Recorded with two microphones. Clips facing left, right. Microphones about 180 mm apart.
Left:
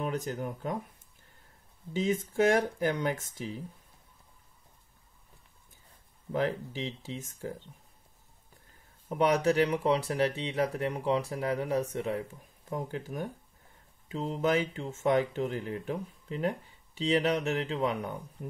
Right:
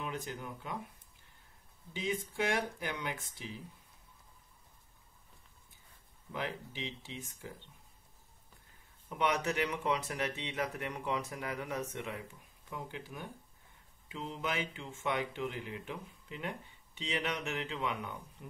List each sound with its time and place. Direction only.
0.0 s speech: 40° left (ahead or behind)
2.0 s speech: 45° left (ahead or behind)
6.3 s speech: 40° left (ahead or behind)
9.1 s speech: 35° left (ahead or behind)